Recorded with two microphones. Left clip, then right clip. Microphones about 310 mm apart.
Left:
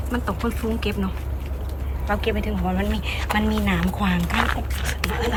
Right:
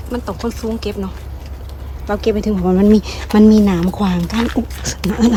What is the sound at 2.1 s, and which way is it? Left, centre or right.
Speech, centre.